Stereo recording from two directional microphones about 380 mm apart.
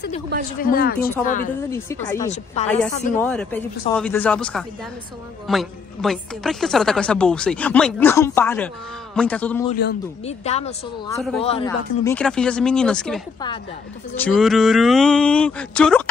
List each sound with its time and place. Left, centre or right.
0.6 s speech: left
1.7 s speech: centre
3.2 s a woman's voice: centre
9.7 s a woman's voice: left; by 16.0 s centre